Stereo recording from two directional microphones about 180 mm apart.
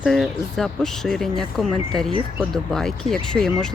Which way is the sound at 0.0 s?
Centre (ahead or behind).